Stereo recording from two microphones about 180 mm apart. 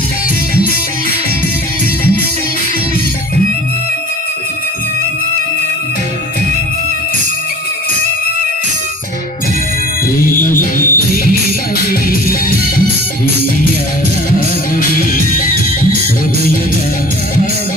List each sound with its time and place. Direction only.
10.3 s music: 50° left (ahead or behind)